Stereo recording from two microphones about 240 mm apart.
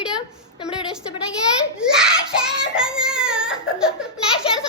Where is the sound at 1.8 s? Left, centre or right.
Centre.